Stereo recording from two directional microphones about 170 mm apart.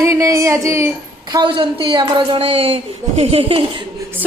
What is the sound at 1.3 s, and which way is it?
A woman's voice, 30° right (ahead or behind).